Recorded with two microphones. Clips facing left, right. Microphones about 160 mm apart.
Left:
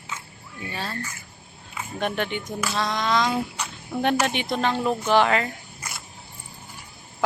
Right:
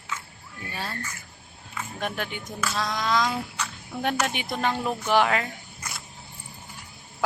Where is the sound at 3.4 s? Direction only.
20° left (ahead or behind).